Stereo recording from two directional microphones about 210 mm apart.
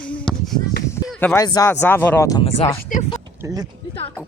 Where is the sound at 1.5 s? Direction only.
15° left (ahead or behind).